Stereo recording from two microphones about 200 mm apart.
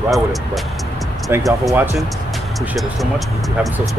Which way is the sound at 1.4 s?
Centre (ahead or behind).